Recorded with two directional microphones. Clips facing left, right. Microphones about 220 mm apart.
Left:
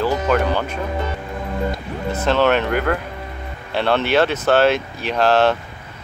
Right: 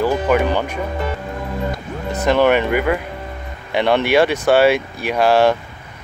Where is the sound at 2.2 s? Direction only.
15° right (ahead or behind).